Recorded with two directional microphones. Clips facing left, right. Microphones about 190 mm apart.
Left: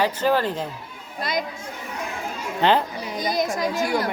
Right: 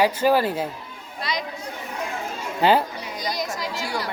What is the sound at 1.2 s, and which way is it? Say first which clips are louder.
Speech: left 3 dB; 50° left (ahead or behind).